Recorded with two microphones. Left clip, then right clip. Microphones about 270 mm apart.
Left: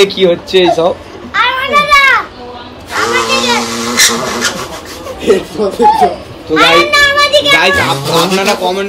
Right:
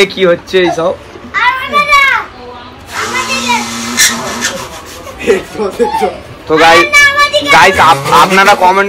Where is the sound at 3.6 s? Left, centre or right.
Centre.